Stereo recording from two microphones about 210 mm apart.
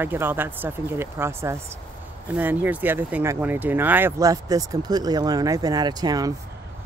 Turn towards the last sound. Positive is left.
turn(degrees=-20)  # may be behind; listen again after turning